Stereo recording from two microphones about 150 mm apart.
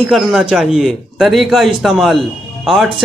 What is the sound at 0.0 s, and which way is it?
A man's voice, 5° right (ahead or behind).